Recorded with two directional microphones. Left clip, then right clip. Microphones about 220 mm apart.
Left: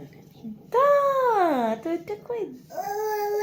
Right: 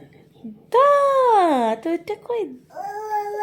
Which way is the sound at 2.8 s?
15° right (ahead or behind).